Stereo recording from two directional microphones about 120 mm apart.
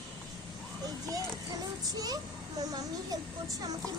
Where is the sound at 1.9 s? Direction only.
30° right (ahead or behind).